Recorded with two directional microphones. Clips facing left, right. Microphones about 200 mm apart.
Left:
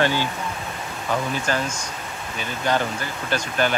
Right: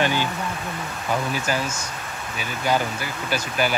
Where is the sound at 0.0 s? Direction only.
15° right (ahead or behind).